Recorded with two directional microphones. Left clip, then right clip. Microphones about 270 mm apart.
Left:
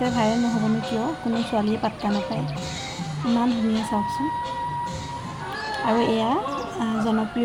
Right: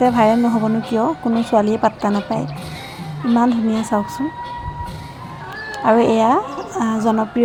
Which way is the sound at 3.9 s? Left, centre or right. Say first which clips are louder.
Right 7 dB; centre.